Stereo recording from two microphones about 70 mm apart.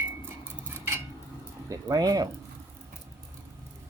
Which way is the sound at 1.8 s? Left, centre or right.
Right.